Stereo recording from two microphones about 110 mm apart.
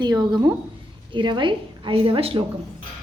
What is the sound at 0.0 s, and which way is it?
Female singing, 40° right (ahead or behind).